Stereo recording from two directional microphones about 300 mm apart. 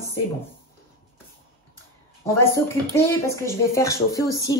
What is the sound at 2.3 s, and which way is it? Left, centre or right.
Speech, centre.